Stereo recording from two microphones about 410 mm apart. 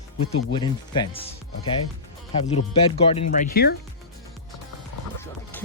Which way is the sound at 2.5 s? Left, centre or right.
Centre.